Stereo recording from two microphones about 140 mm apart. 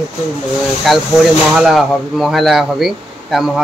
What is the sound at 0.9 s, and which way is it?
Speech, centre (ahead or behind).